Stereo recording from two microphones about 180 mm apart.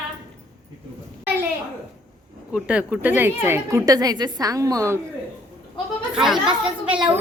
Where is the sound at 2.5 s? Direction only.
5° right (ahead or behind).